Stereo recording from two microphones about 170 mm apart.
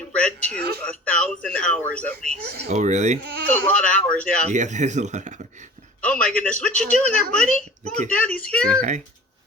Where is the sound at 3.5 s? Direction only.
10° left (ahead or behind).